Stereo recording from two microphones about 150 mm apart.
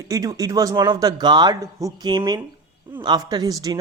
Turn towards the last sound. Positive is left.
turn(degrees=-25)  # may be behind; listen again after turning